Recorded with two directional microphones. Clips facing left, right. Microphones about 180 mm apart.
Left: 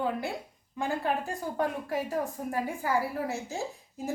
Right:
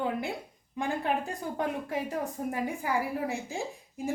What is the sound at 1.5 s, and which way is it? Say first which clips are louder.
A woman's voice: left 2 dB; 20° right (ahead or behind).